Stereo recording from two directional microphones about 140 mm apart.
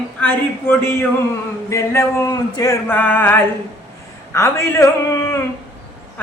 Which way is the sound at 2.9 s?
15° left (ahead or behind).